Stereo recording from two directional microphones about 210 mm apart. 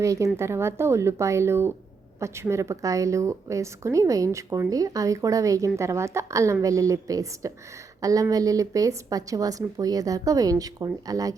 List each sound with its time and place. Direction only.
0.0 s a woman's voice: 15° right (ahead or behind)